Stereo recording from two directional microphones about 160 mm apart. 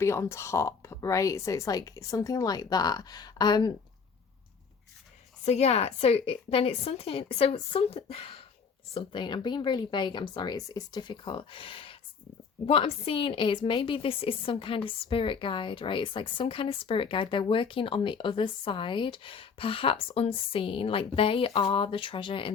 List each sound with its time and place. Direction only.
0.0 s speech: 15° left (ahead or behind)
5.5 s a woman's voice: 40° left (ahead or behind)